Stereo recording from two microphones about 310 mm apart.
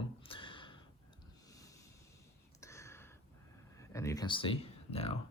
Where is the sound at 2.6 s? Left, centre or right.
Centre.